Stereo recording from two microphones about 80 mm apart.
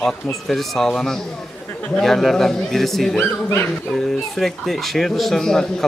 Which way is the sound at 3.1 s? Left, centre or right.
Left.